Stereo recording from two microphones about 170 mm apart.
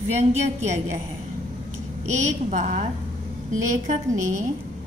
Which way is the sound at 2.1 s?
45° right (ahead or behind).